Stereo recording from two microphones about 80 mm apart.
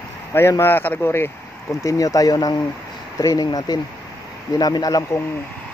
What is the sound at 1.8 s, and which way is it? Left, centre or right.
Speech, left.